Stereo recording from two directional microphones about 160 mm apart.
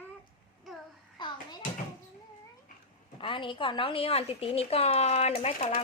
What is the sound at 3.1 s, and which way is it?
A woman's voice, 30° left (ahead or behind).